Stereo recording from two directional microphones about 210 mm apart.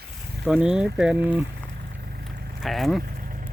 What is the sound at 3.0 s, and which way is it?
Vehicle, 45° right (ahead or behind).